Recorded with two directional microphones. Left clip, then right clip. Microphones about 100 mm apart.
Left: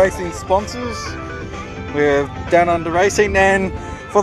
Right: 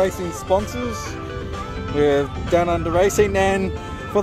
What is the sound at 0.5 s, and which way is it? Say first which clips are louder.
Speech: left 3 dB; 40° right (ahead or behind).